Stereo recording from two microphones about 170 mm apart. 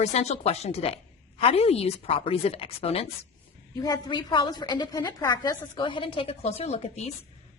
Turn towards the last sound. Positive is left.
turn(degrees=40)  # may be behind; listen again after turning